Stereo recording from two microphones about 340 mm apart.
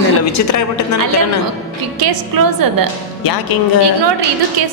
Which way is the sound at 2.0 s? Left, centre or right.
Right.